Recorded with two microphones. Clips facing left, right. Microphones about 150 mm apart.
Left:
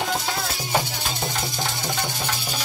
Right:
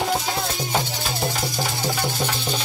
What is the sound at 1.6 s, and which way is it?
Music, 15° right (ahead or behind).